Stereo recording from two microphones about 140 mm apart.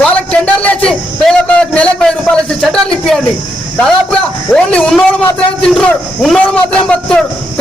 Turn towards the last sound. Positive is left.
turn(degrees=5)  # may be behind; listen again after turning